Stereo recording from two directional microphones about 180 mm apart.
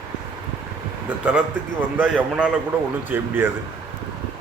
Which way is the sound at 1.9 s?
10° right (ahead or behind).